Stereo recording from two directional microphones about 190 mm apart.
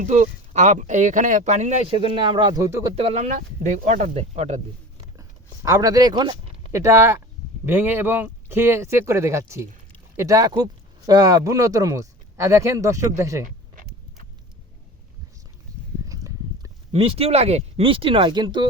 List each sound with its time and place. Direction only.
0.0 s speech: 40° right (ahead or behind)
1.9 s speech: 25° right (ahead or behind)
2.9 s speech: 35° right (ahead or behind)
5.6 s speech: 20° right (ahead or behind)
16.0 s a sound: 15° right (ahead or behind)
16.9 s speech: 30° right (ahead or behind)